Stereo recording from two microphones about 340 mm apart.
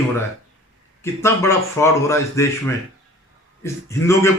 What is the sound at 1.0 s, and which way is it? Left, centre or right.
A man's voice, centre.